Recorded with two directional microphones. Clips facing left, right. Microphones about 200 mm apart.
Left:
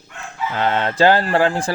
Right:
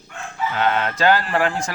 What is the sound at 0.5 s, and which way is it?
Speech, 30° left (ahead or behind).